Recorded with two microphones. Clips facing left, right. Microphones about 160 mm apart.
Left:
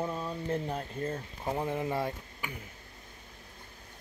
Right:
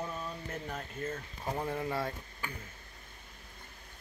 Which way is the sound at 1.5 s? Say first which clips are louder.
Left 3 dB; 20° left (ahead or behind).